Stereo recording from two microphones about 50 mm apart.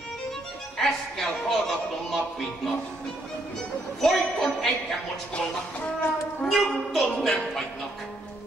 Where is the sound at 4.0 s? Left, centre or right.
Centre.